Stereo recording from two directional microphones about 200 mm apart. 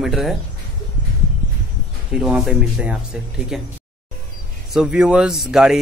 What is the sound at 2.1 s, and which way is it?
Speech, centre (ahead or behind).